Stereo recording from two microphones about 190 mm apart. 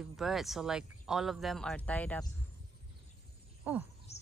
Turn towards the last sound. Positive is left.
turn(degrees=-10)  # may be behind; listen again after turning